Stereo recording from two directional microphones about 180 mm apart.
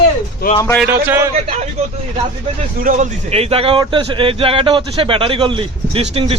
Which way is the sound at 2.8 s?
45° right (ahead or behind).